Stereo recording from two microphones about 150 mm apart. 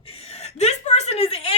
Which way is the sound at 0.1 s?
40° left (ahead or behind).